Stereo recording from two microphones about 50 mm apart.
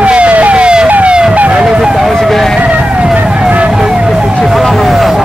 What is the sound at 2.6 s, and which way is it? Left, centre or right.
Vehicle, right.